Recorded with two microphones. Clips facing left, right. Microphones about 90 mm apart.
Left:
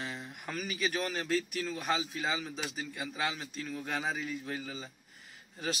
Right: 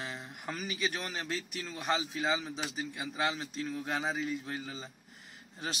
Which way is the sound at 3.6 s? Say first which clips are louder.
Right 1 dB; 20° right (ahead or behind).